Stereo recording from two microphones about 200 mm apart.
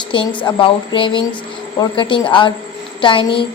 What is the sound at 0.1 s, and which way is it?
Speech, 25° left (ahead or behind).